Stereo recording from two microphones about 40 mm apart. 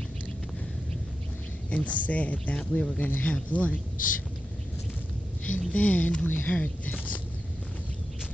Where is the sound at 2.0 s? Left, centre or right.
Left.